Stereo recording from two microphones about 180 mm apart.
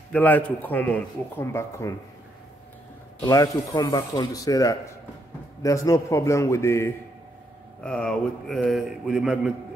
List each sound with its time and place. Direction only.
0.1 s a man's voice: 10° left (ahead or behind)
3.3 s a man's voice: 20° left (ahead or behind)
7.8 s a man's voice: 5° left (ahead or behind)